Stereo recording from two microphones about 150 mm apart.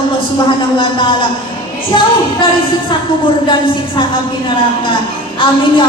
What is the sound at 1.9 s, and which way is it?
Speech, 30° left (ahead or behind).